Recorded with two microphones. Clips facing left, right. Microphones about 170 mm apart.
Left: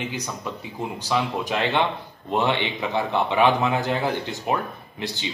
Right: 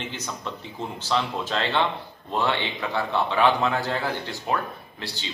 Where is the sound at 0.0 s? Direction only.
10° left (ahead or behind).